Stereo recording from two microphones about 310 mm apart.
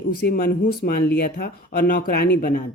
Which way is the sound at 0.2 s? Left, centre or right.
Left.